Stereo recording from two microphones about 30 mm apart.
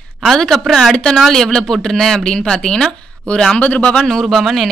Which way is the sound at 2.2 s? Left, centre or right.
Left.